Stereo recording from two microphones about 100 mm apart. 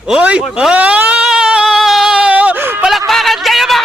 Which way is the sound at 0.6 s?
15° right (ahead or behind).